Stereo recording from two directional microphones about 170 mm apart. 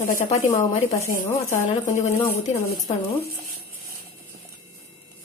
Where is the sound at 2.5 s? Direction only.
15° left (ahead or behind).